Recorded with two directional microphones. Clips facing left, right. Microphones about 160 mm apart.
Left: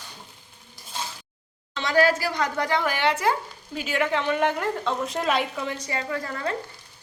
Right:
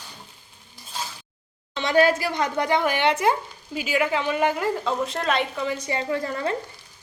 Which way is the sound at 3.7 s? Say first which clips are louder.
Right 2 dB; 5° right (ahead or behind).